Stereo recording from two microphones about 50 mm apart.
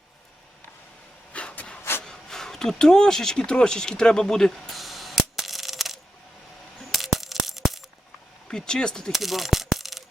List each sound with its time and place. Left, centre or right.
1.3 s vehicle: left
2.0 s a sound: centre
6.7 s coin: centre
8.4 s speech: centre
9.1 s mechanisms: centre